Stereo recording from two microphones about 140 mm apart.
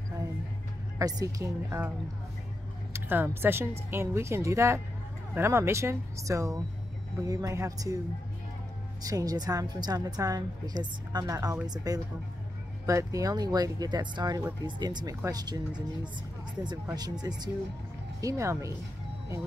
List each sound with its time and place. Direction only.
0.9 s a woman's voice: 25° right (ahead or behind)
2.9 s a woman's voice: 15° right (ahead or behind)
9.0 s a woman's voice: 25° right (ahead or behind)